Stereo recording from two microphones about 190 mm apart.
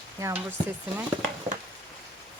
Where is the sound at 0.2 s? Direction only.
15° right (ahead or behind).